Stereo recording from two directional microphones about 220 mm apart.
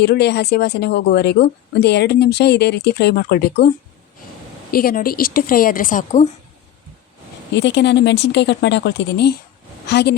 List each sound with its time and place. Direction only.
0.0 s speech: 50° left (ahead or behind)
4.7 s a woman's voice: 40° left (ahead or behind)
7.5 s speech: 55° left (ahead or behind)